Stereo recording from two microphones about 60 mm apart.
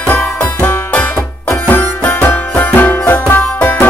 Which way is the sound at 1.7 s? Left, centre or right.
Left.